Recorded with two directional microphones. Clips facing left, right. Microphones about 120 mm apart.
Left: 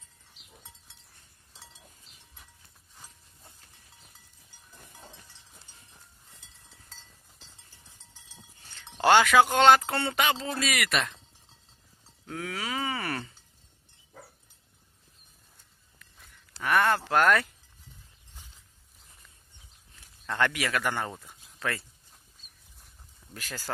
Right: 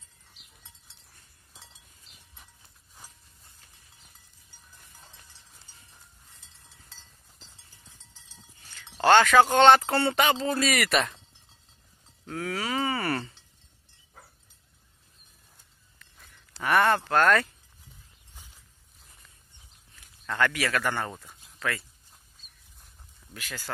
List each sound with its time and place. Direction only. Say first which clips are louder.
8.7 s speech: right 2 dB; 15° left (ahead or behind); by 11.2 s centre (ahead or behind)
12.3 s groan: right 3 dB; centre (ahead or behind)
16.6 s a sound: right 2 dB; centre (ahead or behind)
17.0 s speech: right 1 dB; 10° left (ahead or behind)
20.2 s speech: right 1 dB; 20° left (ahead or behind)
21.5 s speech: right 1 dB; 25° left (ahead or behind)
23.3 s speech: even; 40° left (ahead or behind)